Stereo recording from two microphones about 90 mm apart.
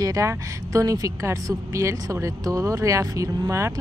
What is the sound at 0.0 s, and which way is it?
A woman's voice, 40° right (ahead or behind).